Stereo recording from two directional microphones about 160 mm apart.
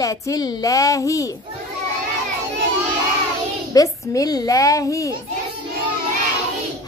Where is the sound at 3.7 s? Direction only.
20° left (ahead or behind).